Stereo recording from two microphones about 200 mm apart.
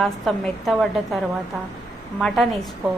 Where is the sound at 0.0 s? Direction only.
Centre (ahead or behind).